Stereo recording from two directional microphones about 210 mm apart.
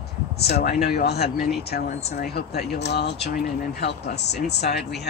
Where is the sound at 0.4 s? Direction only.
50° left (ahead or behind).